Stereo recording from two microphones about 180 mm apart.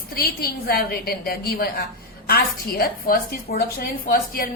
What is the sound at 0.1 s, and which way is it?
A woman's voice, 55° left (ahead or behind).